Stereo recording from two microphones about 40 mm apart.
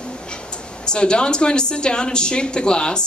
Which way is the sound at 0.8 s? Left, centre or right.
Left.